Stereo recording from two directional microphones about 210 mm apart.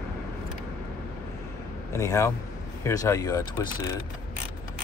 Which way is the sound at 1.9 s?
15° left (ahead or behind).